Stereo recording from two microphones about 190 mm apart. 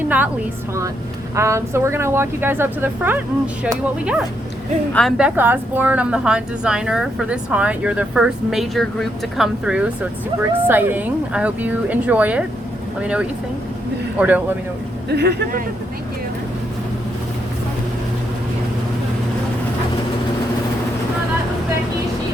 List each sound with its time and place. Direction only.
1.4 s a woman's voice: 15° right (ahead or behind)
15.1 s speech: 60° right (ahead or behind)